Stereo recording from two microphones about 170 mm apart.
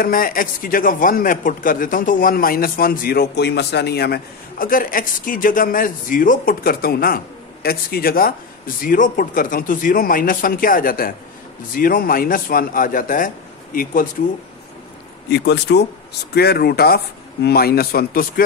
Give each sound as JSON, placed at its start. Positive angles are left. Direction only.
{"t": 0.0, "sound": "a man's voice", "side_deg": 55}
{"t": 15.2, "sound": "speech", "side_deg": 75}
{"t": 16.3, "sound": "a man's voice", "side_deg": 70}